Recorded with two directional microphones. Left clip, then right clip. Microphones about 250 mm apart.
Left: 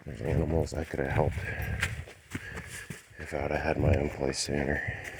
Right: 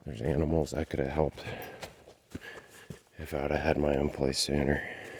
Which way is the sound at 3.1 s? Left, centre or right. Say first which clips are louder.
Even; right.